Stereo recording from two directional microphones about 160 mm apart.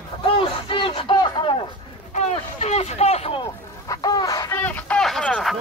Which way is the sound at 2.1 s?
45° left (ahead or behind).